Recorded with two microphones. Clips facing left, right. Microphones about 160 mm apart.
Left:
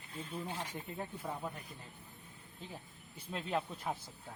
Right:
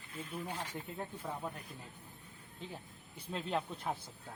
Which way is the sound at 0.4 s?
15° left (ahead or behind).